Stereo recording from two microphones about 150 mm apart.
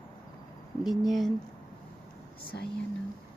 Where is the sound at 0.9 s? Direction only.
Centre (ahead or behind).